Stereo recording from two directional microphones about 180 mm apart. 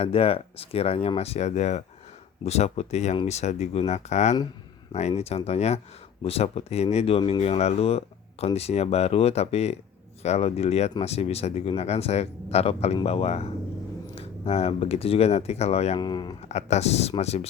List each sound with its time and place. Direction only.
0.0 s speech: 30° left (ahead or behind)
16.0 s speech: 25° left (ahead or behind)
16.5 s speech: 40° left (ahead or behind)